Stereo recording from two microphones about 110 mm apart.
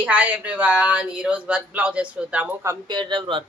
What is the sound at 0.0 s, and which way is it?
Speech, 10° right (ahead or behind).